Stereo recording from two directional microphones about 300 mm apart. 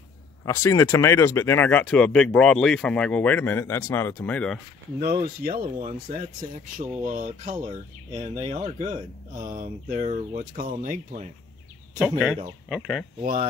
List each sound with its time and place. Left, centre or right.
0.5 s speech: centre
5.0 s speech: right
12.0 s speech: centre
13.2 s speech: right